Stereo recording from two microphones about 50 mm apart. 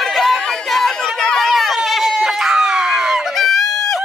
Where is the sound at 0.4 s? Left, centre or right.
Centre.